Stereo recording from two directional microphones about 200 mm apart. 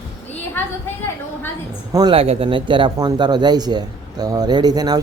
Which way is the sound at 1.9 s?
20° right (ahead or behind).